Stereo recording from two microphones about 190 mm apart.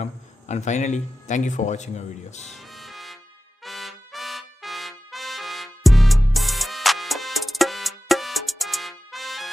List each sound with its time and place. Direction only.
0.0 s speech: 35° left (ahead or behind)
2.5 s music: centre (ahead or behind)
3.6 s trumpet: centre (ahead or behind)